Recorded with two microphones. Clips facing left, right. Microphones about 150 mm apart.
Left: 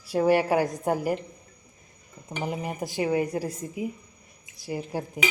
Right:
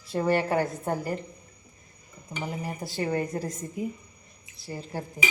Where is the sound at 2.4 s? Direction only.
20° left (ahead or behind).